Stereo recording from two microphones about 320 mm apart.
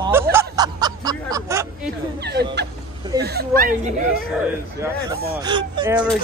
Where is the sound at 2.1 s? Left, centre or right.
Right.